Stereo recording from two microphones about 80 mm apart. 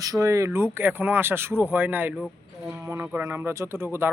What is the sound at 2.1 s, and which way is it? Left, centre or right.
Speech, centre.